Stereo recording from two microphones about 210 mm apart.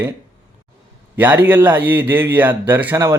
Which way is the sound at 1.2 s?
10° right (ahead or behind).